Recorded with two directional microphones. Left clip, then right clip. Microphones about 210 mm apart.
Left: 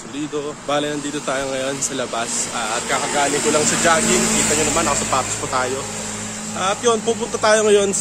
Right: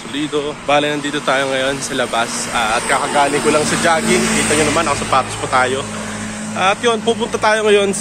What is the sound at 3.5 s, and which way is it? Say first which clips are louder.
Speech: right 2 dB; 5° right (ahead or behind).